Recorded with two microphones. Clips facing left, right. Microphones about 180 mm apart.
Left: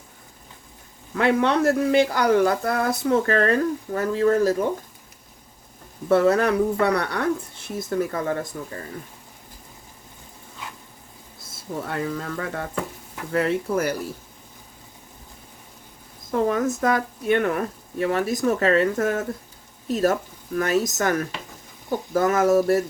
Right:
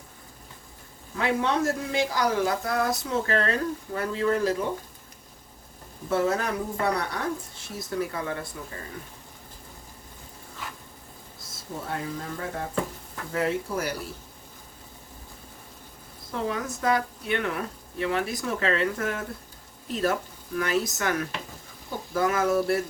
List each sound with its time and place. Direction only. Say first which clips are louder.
1.1 s speech: left 6 dB; 65° left (ahead or behind); by 4.5 s 45° left (ahead or behind)
6.1 s speech: left 7 dB; 70° left (ahead or behind)
7.8 s speech: left 5 dB; 50° left (ahead or behind)
11.9 s speech: left 4 dB; 70° left (ahead or behind)
13.3 s speech: left 5 dB; 60° left (ahead or behind)
16.3 s speech: left 8 dB; 50° left (ahead or behind)